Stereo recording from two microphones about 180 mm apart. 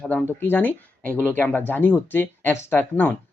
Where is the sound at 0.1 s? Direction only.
10° left (ahead or behind).